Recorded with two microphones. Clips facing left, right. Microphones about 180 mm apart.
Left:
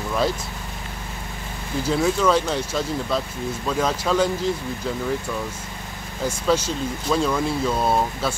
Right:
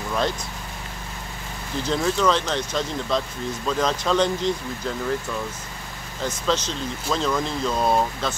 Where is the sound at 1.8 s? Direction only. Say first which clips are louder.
Left 2 dB; 5° left (ahead or behind).